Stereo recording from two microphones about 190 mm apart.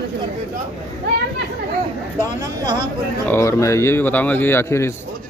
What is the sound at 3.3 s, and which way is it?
Speech, 15° left (ahead or behind).